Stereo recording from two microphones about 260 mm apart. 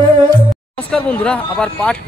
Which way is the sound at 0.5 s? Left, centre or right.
Centre.